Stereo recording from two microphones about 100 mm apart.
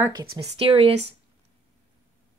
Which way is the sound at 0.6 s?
65° right (ahead or behind).